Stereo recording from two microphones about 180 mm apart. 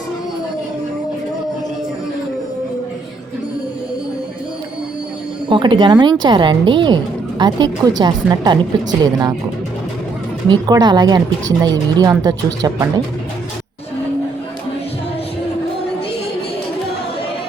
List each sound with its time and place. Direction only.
5.5 s a woman's voice: 25° right (ahead or behind)
10.5 s a woman's voice: 25° right (ahead or behind)